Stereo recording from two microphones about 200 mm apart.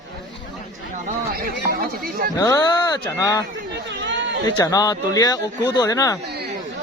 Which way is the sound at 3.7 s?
60° right (ahead or behind).